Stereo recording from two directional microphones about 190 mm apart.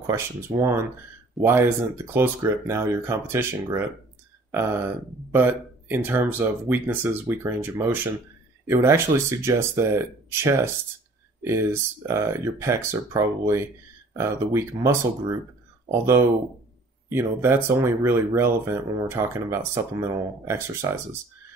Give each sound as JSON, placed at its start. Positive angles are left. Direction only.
{"t": 0.6, "sound": "speech", "side_deg": -15}
{"t": 17.1, "sound": "speech", "side_deg": -10}